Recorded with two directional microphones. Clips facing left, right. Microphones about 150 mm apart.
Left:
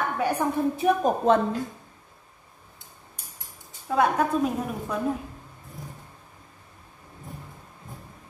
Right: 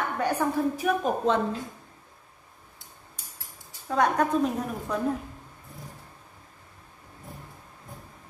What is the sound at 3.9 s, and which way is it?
A woman's voice, 5° left (ahead or behind).